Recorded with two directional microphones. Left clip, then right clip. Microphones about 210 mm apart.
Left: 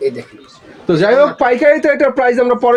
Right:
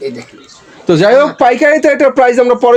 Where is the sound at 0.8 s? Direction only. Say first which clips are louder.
Right 3 dB; 50° right (ahead or behind).